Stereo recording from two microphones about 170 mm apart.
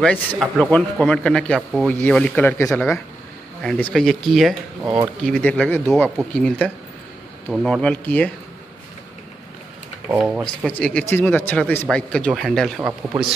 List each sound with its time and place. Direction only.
0.0 s speech: 5° left (ahead or behind)
4.8 s speech: 20° right (ahead or behind)
5.2 s speech: 5° left (ahead or behind)
10.1 s speech: 5° right (ahead or behind)
10.6 s speech: 5° left (ahead or behind)